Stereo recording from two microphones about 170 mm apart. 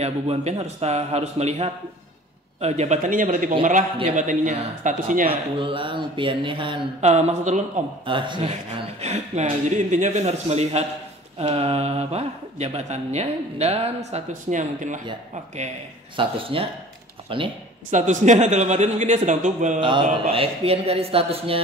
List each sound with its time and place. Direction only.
0.0 s speech: 40° right (ahead or behind)
5.3 s speech: 30° right (ahead or behind)
7.0 s speech: 40° right (ahead or behind)
8.0 s speech: 30° right (ahead or behind); by 15.0 s 45° right (ahead or behind)
16.2 s speech: 30° right (ahead or behind)
17.9 s speech: 45° right (ahead or behind)
19.8 s speech: 30° right (ahead or behind)